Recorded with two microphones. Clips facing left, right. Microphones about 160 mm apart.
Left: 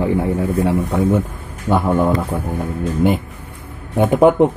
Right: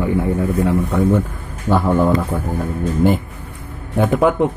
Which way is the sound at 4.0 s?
25° left (ahead or behind).